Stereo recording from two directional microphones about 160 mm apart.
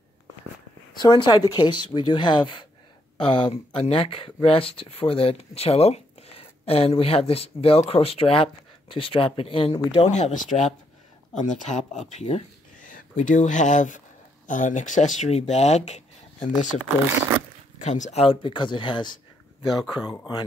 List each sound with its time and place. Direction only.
1.0 s speech: 30° left (ahead or behind); by 12.0 s 50° left (ahead or behind)
12.1 s a sound: 45° left (ahead or behind)
12.9 s speech: 55° left (ahead or behind)
17.0 s speech: 15° right (ahead or behind)
17.7 s speech: 50° left (ahead or behind); by 19.1 s 30° left (ahead or behind)
19.7 s speech: centre (ahead or behind)